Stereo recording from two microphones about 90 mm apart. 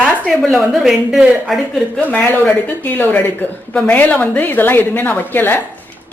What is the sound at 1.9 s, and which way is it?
A woman's voice, 10° left (ahead or behind).